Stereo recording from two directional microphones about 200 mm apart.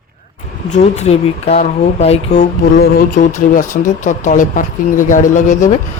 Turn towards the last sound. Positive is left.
turn(degrees=40)  # may be behind; listen again after turning